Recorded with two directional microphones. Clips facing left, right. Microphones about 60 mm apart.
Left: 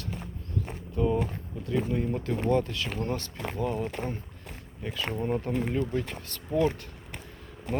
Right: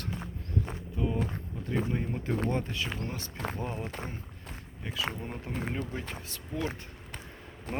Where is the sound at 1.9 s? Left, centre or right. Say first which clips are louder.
Left 3 dB; centre.